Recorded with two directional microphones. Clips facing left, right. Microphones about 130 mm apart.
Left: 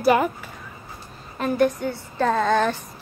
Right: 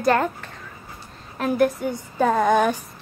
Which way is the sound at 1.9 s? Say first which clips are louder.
Right 2 dB; 10° right (ahead or behind).